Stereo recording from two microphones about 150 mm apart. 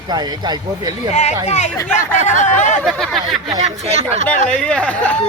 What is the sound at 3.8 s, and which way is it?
Speech, 45° right (ahead or behind).